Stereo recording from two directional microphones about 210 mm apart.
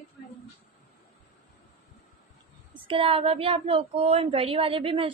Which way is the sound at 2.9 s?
25° right (ahead or behind).